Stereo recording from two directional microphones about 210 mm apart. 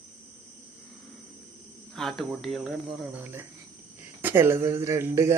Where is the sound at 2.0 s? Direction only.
Centre (ahead or behind).